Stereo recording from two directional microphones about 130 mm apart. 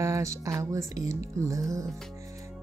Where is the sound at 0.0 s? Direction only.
25° right (ahead or behind).